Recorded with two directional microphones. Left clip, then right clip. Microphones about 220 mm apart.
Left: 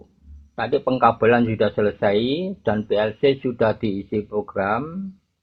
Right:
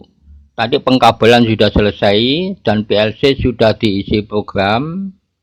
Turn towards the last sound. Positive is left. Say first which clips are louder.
# right 8 dB
turn(degrees=-30)  # may be behind; listen again after turning